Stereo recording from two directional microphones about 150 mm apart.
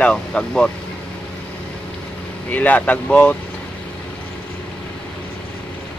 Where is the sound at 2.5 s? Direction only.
10° left (ahead or behind).